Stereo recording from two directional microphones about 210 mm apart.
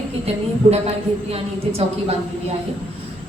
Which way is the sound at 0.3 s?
30° right (ahead or behind).